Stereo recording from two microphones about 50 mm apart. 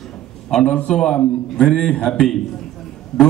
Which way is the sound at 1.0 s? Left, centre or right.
Centre.